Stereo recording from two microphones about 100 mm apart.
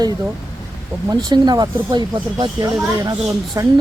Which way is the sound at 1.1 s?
40° right (ahead or behind).